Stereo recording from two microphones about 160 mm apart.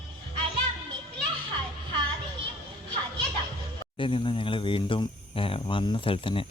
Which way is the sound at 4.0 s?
30° left (ahead or behind).